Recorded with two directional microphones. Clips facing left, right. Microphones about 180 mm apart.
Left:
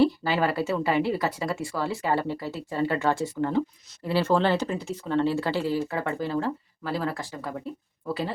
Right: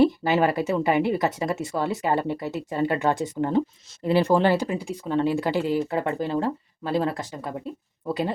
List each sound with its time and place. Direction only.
0.0 s speech: 20° right (ahead or behind)